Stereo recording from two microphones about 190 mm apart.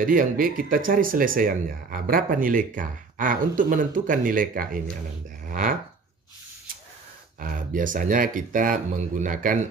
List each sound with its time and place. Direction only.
0.0 s speech: 45° right (ahead or behind)
7.3 s speech: 45° right (ahead or behind)